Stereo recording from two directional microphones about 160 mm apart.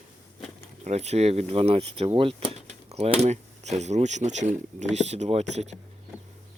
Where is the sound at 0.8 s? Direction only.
45° right (ahead or behind).